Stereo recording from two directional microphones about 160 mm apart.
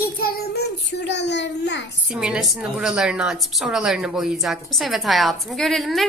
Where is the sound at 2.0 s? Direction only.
5° right (ahead or behind).